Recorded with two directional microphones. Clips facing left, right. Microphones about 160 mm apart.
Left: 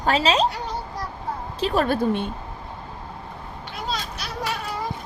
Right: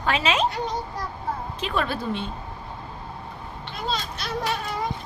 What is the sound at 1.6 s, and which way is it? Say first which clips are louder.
Speech: left 7 dB; 40° left (ahead or behind).